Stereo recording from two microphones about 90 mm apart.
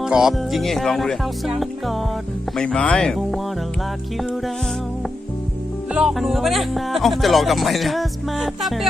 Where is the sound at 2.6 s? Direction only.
10° left (ahead or behind).